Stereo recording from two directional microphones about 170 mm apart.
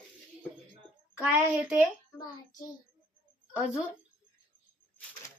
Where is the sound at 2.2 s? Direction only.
20° left (ahead or behind).